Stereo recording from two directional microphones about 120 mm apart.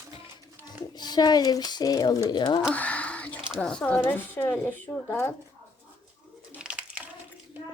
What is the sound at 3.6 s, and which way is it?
Speech, 5° left (ahead or behind).